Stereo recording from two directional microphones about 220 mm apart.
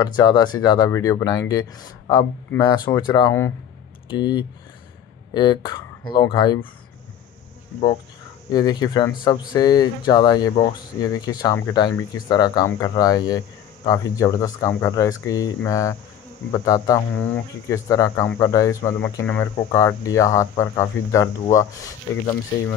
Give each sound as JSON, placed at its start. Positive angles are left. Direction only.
{"t": 0.0, "sound": "speech", "side_deg": 20}
{"t": 8.5, "sound": "speech", "side_deg": 20}